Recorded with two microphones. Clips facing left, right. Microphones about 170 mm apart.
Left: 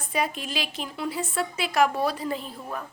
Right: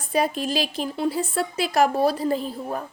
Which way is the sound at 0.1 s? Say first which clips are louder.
Right 6 dB; 35° right (ahead or behind).